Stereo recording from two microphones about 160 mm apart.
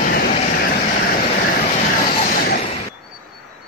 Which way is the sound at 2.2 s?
65° left (ahead or behind).